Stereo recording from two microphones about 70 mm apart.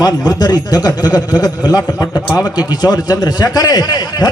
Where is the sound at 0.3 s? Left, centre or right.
Left.